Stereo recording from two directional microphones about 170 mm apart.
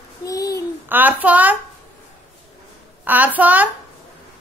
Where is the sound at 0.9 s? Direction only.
10° right (ahead or behind).